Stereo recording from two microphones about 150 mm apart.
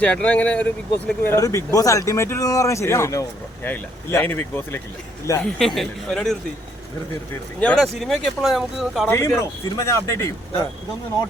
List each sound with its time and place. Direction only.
0.0 s speech: 10° left (ahead or behind)
1.2 s speech: 20° left (ahead or behind)
5.4 s speech: centre (ahead or behind)
7.6 s speech: 5° left (ahead or behind)
9.0 s speech: 15° left (ahead or behind)